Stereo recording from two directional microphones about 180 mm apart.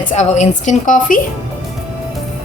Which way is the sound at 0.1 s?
40° left (ahead or behind).